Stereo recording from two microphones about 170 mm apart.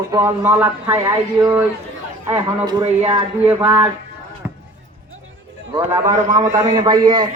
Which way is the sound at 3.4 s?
10° right (ahead or behind).